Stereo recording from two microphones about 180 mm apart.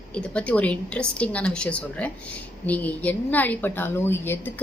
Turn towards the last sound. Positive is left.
turn(degrees=10)  # may be behind; listen again after turning